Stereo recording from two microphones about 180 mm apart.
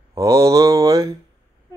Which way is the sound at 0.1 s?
15° right (ahead or behind).